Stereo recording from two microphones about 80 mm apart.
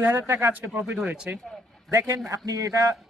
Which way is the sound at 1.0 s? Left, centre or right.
Centre.